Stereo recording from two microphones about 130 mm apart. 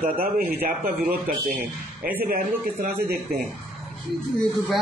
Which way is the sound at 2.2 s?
90° right.